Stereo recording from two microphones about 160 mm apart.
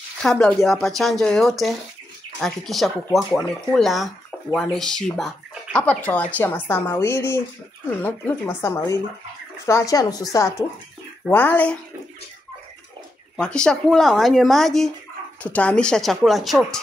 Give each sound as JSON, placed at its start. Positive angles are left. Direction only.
{"t": 0.2, "sound": "speech", "side_deg": 5}
{"t": 11.2, "sound": "speech", "side_deg": 10}
{"t": 13.4, "sound": "speech", "side_deg": 5}